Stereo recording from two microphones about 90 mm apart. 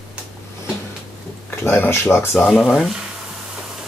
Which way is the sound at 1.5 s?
25° left (ahead or behind).